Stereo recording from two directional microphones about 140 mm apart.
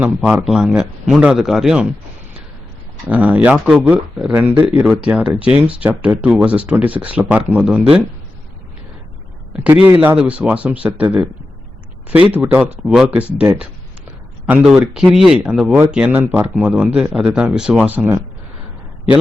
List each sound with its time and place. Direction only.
0.0 s speech: 10° right (ahead or behind)
3.1 s speech: 10° right (ahead or behind)
9.9 s speech: 15° right (ahead or behind)
14.9 s speech: 5° right (ahead or behind)